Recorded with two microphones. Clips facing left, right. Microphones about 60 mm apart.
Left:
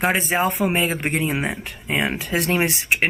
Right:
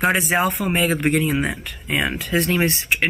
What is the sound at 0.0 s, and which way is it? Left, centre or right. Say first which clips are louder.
Speech: right 1 dB; centre.